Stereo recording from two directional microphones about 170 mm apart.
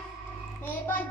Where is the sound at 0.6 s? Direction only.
10° left (ahead or behind).